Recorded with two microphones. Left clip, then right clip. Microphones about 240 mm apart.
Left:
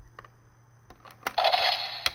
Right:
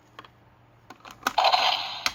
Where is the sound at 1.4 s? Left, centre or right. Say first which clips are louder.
Right 3 dB; centre.